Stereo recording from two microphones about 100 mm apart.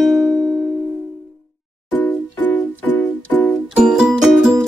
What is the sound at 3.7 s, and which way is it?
Music, 10° right (ahead or behind).